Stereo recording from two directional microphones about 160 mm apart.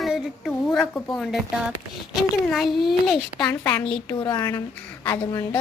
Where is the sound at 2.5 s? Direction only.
Centre (ahead or behind).